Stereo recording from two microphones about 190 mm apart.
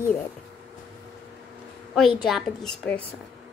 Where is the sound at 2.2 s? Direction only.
Centre (ahead or behind).